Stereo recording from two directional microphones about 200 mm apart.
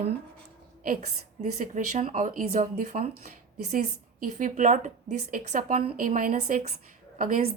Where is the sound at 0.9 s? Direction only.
35° right (ahead or behind).